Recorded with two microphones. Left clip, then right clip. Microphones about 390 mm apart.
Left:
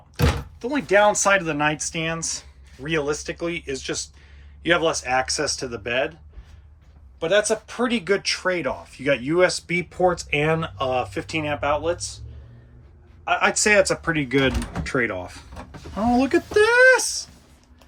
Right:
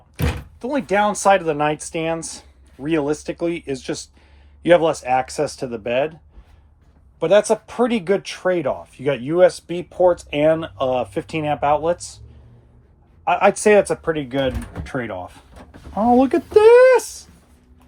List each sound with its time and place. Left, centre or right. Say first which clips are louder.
0.6 s speech: left 1 dB; centre
7.2 s speech: right 5 dB; centre
9.6 s speech: left 3 dB; centre
10.4 s speech: right 9 dB; centre
13.2 s speech: right 4 dB; centre
16.1 s speech: right 4 dB; centre